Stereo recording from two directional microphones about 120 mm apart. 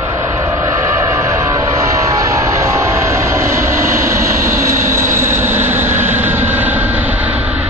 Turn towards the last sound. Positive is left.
turn(degrees=-10)  # may be behind; listen again after turning